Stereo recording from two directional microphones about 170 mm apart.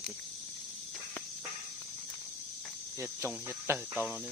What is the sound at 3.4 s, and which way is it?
Speech, 15° right (ahead or behind).